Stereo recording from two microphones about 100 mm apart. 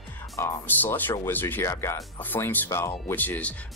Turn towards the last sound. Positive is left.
turn(degrees=20)  # may be behind; listen again after turning